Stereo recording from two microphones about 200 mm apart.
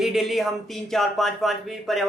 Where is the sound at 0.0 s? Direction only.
Centre (ahead or behind).